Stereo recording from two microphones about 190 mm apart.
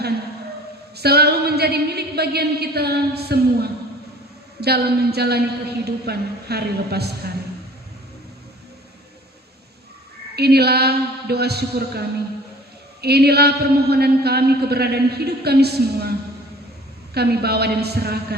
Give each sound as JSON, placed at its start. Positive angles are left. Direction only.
{"t": 0.9, "sound": "a man's voice", "side_deg": -55}
{"t": 10.3, "sound": "a man's voice", "side_deg": -60}
{"t": 17.2, "sound": "a man's voice", "side_deg": -55}